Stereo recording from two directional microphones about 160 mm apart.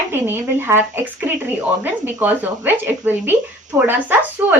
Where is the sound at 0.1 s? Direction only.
15° right (ahead or behind).